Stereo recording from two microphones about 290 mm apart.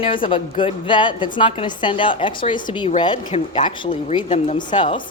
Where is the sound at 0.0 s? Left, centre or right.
Centre.